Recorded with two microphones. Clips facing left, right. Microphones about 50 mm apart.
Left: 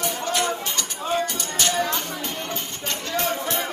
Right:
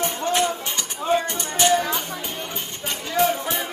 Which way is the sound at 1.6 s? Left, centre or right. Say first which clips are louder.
Right 7 dB; right.